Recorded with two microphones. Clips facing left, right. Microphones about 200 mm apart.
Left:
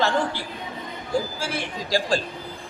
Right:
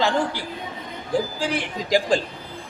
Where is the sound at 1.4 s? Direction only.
15° right (ahead or behind).